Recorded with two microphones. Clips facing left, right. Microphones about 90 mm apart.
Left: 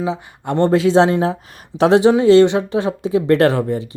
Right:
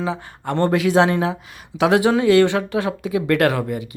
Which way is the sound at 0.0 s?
20° left (ahead or behind).